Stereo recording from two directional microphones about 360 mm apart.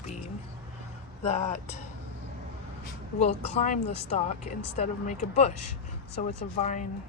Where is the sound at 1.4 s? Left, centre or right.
Centre.